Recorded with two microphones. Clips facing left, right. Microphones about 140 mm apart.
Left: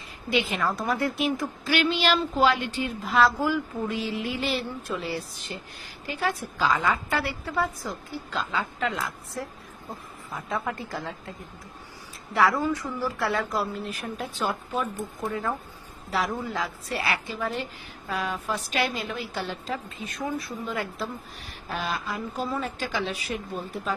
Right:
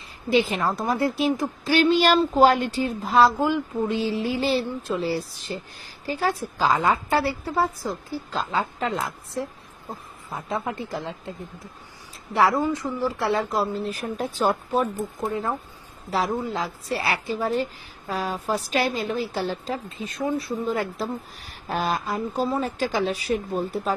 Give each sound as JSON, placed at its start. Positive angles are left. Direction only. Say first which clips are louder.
{"t": 0.3, "sound": "a woman's voice", "louder": "right 4 dB", "side_deg": -35}
{"t": 12.4, "sound": "a woman's voice", "louder": "right 2 dB", "side_deg": -25}